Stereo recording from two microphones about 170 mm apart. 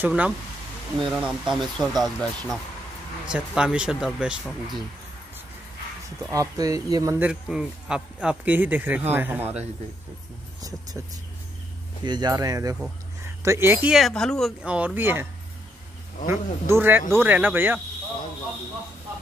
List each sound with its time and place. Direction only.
0.0 s speech: 10° right (ahead or behind)
6.3 s speech: 20° right (ahead or behind)
7.2 s speech: 5° right (ahead or behind)
12.0 s speech: 25° right (ahead or behind)
13.8 s speech: centre (ahead or behind)
16.3 s speech: 15° right (ahead or behind)